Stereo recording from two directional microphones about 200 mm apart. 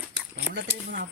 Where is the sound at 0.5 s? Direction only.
60° right (ahead or behind).